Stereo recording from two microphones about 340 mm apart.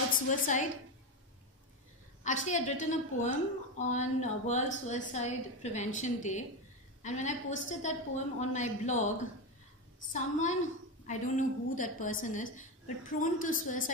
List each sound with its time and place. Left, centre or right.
0.3 s a woman's voice: left
2.2 s a woman's voice: left
10.1 s a woman's voice: left